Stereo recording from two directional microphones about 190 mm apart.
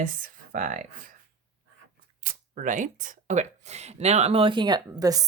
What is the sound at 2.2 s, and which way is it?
Speech, 45° right (ahead or behind).